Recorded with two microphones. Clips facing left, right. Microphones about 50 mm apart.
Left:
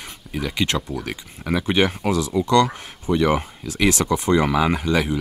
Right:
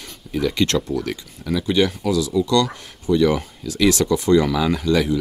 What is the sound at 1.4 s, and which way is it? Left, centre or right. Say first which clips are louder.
Speech: right 1 dB; left.